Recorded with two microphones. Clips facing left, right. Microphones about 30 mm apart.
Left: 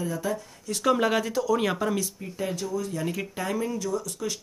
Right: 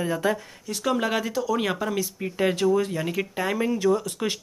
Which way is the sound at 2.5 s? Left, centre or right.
Right.